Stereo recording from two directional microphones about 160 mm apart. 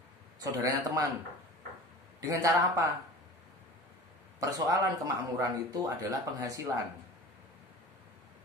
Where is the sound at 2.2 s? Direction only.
20° right (ahead or behind).